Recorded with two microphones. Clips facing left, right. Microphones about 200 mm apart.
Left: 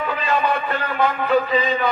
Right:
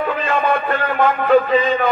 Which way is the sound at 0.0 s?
50° right (ahead or behind).